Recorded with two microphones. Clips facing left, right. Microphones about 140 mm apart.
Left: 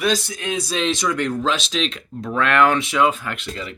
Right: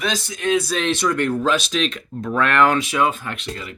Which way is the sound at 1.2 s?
55° right (ahead or behind).